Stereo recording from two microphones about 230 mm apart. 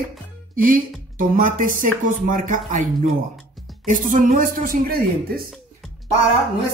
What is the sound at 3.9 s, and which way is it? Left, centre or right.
Speech, right.